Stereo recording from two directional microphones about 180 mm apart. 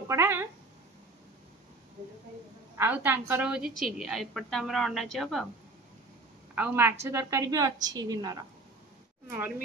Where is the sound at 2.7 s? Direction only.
10° right (ahead or behind).